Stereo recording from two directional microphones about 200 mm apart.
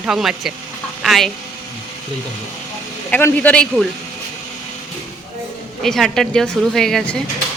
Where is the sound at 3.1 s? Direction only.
5° left (ahead or behind).